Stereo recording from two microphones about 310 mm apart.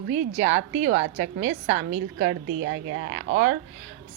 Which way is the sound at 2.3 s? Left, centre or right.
Right.